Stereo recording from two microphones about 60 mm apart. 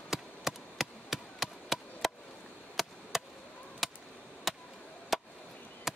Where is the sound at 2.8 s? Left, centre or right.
Centre.